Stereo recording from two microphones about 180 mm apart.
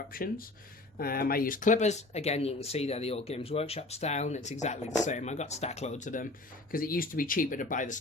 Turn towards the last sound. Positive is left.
turn(degrees=45)  # may be behind; listen again after turning